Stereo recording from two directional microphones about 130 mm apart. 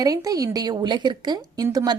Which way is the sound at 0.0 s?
30° right (ahead or behind).